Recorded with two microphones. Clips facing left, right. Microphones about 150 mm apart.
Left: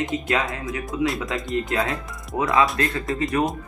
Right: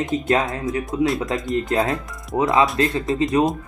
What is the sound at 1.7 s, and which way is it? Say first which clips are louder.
Speech: right 4 dB; 25° right (ahead or behind).